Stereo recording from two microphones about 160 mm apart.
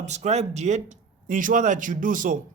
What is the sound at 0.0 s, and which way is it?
Speech, 45° right (ahead or behind).